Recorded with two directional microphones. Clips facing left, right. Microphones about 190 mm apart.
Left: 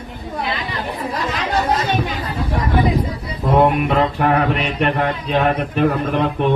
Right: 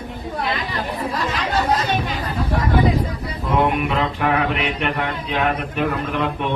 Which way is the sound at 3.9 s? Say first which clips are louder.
Left 4 dB; 45° left (ahead or behind).